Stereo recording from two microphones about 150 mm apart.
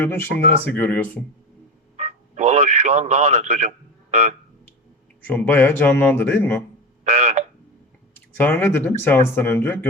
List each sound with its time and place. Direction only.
0.0 s speech: 15° left (ahead or behind)
2.0 s radio: 50° right (ahead or behind)
4.1 s speech: 50° right (ahead or behind)
5.2 s speech: 10° left (ahead or behind)
7.0 s frog: 45° right (ahead or behind)
8.1 s speech: 15° left (ahead or behind)